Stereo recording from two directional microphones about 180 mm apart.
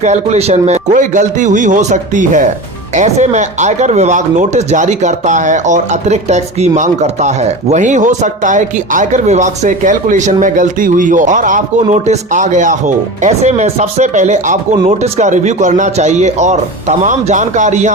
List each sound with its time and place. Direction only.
0.0 s speech: 40° right (ahead or behind)